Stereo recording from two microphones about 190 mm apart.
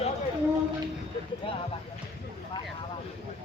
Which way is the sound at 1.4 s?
30° left (ahead or behind).